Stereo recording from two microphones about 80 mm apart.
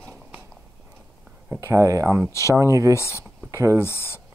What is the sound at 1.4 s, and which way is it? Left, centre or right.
Speech, right.